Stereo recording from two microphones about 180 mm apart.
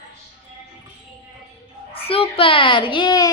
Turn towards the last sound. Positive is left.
turn(degrees=20)  # may be behind; listen again after turning